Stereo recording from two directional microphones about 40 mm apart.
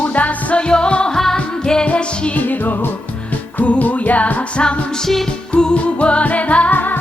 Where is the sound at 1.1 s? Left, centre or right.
Centre.